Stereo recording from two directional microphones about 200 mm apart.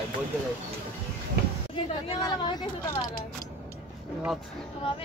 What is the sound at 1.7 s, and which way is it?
A woman's voice, 20° left (ahead or behind).